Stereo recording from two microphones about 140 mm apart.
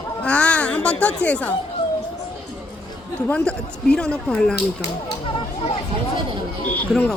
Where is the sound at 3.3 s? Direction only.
5° left (ahead or behind).